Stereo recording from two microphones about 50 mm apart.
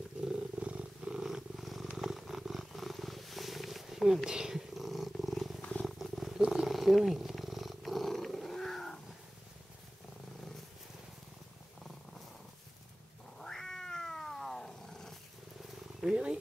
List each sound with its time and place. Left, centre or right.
0.2 s wild animals: centre
2.0 s purr: centre
5.6 s purr: centre
5.9 s purr: centre
13.4 s cat: centre
16.0 s purr: centre